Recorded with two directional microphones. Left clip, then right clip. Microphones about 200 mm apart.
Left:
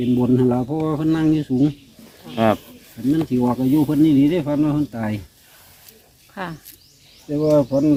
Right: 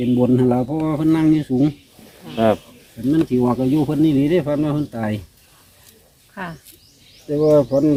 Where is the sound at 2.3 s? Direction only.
30° left (ahead or behind).